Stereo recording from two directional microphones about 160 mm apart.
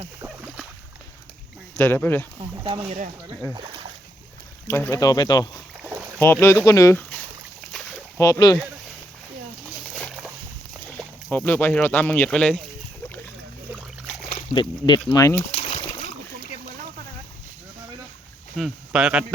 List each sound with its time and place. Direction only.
1.7 s speech: 15° left (ahead or behind)
2.4 s speech: 35° right (ahead or behind)
4.7 s speech: 15° left (ahead or behind)
6.1 s speech: 15° left (ahead or behind)
8.2 s speech: 20° left (ahead or behind)
10.0 s boat: centre (ahead or behind)
10.8 s speech: 5° left (ahead or behind)
14.5 s speech: 30° left (ahead or behind)
15.4 s a sound: 35° left (ahead or behind)
18.5 s speech: 5° right (ahead or behind)